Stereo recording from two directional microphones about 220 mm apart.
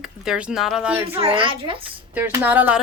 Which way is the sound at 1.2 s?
25° right (ahead or behind).